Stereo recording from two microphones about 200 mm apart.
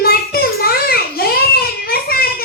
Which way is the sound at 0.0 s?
50° left (ahead or behind).